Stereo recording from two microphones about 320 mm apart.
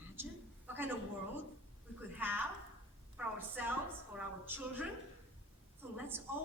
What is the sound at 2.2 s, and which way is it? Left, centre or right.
A woman's voice, centre.